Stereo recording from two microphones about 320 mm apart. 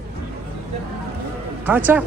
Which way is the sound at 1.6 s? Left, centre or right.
Centre.